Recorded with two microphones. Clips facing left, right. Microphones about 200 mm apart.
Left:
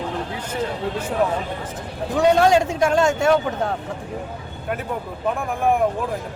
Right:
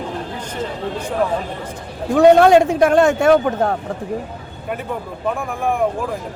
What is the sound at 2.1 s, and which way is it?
Speech, 55° right (ahead or behind).